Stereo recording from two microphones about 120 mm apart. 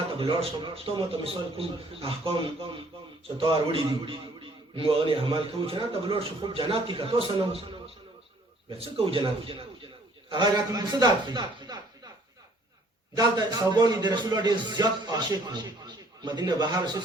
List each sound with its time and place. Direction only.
0.2 s a man's voice: 45° right (ahead or behind)
8.8 s a man's voice: 50° right (ahead or behind)
10.2 s a man's voice: 40° right (ahead or behind)
13.1 s a man's voice: 35° right (ahead or behind)